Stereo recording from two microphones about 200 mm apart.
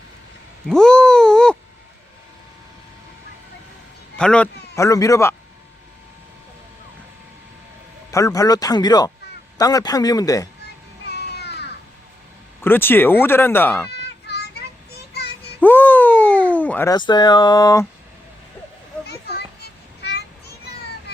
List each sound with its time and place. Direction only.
0.7 s groan: 5° left (ahead or behind)
4.2 s a man's voice: 5° left (ahead or behind)
4.7 s speech: 15° left (ahead or behind)
8.1 s a man's voice: 15° left (ahead or behind)
11.1 s a sound: 55° left (ahead or behind)
12.6 s speech: 10° left (ahead or behind)
14.0 s children playing: 55° left (ahead or behind)
14.9 s child singing: 55° left (ahead or behind)
15.6 s a sound: 10° left (ahead or behind)
20.0 s a sound: 55° left (ahead or behind)